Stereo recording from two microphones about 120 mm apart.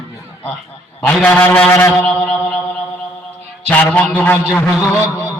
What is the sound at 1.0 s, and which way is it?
A man's voice, 15° left (ahead or behind).